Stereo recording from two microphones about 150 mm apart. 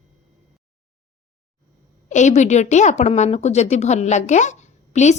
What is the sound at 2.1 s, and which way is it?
A woman's voice, 55° left (ahead or behind).